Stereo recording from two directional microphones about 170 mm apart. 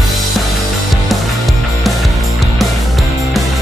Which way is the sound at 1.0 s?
Centre (ahead or behind).